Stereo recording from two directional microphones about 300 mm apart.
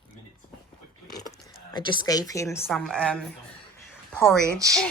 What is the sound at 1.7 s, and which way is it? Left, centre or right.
A woman's voice, centre.